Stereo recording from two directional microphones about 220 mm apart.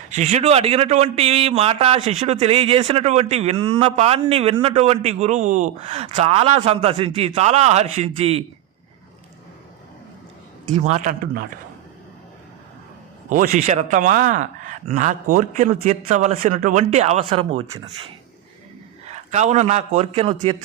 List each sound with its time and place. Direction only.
0.1 s a man's voice: 30° right (ahead or behind)
10.7 s a man's voice: 30° right (ahead or behind)
13.3 s a man's voice: 35° right (ahead or behind)
19.0 s a man's voice: 30° right (ahead or behind)